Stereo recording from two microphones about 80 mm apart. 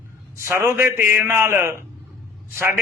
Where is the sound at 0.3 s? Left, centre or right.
Right.